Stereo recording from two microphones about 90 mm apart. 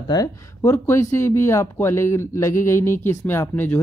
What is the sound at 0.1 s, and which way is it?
Speech, 40° left (ahead or behind).